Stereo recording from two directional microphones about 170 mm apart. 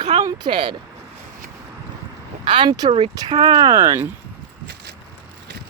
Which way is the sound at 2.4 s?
30° right (ahead or behind).